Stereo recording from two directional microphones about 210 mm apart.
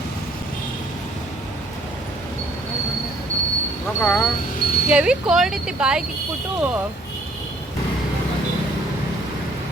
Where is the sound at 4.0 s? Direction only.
10° left (ahead or behind).